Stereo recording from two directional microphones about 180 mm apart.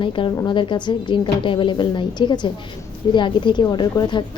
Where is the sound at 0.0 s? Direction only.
25° left (ahead or behind).